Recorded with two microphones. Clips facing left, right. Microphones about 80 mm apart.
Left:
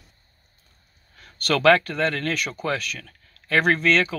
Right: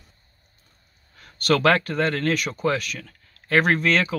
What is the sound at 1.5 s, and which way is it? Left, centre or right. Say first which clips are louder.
Speech: left 1 dB; right.